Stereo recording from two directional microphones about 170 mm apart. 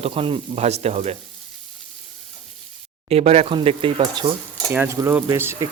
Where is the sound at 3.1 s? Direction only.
40° right (ahead or behind).